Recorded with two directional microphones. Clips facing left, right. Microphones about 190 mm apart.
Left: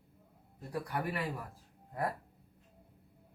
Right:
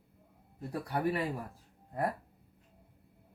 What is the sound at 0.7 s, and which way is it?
Speech, 25° right (ahead or behind).